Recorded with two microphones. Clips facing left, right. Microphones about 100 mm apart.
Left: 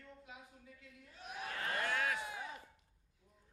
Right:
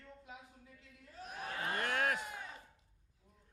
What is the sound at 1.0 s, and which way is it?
Speech, 35° right (ahead or behind).